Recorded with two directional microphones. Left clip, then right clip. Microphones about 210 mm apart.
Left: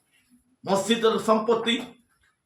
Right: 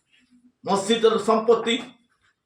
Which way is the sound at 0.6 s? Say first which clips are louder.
Right 3 dB; 15° left (ahead or behind).